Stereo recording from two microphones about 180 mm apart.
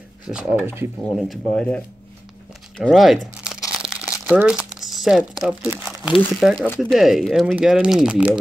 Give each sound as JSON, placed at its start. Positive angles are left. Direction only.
{"t": 0.2, "sound": "speech", "side_deg": -5}
{"t": 1.3, "sound": "speech", "side_deg": 5}
{"t": 2.8, "sound": "speech", "side_deg": 0}
{"t": 3.9, "sound": "crumpling", "side_deg": -5}
{"t": 6.4, "sound": "speech", "side_deg": 0}